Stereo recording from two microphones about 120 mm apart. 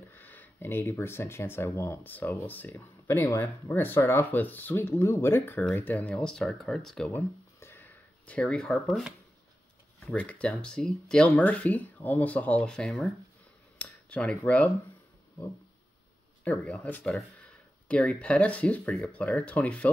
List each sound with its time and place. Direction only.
0.1 s speech: 15° left (ahead or behind)
7.1 s a sound: 15° left (ahead or behind)
10.1 s speech: 10° left (ahead or behind)
16.4 s speech: 10° left (ahead or behind)